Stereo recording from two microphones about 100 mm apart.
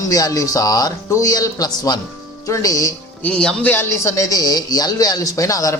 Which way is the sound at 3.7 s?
30° left (ahead or behind).